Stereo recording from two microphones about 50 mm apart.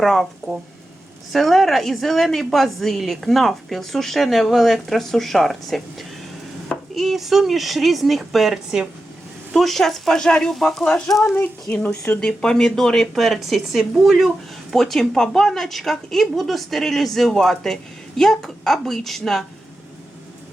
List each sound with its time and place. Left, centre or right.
0.0 s speech: centre
1.3 s a woman's voice: centre
9.6 s speech: centre
11.7 s a woman's voice: left; by 14.3 s centre
14.7 s a woman's voice: centre